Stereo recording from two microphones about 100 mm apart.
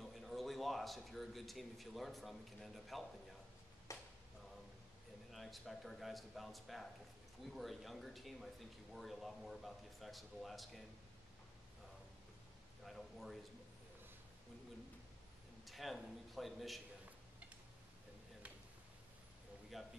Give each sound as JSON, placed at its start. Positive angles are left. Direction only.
{"t": 0.0, "sound": "a man's voice", "side_deg": 0}
{"t": 3.9, "sound": "a sound", "side_deg": 30}
{"t": 5.3, "sound": "speech", "side_deg": 0}
{"t": 12.8, "sound": "a man's voice", "side_deg": 0}
{"t": 15.6, "sound": "a man's voice", "side_deg": 0}
{"t": 19.7, "sound": "speech", "side_deg": 0}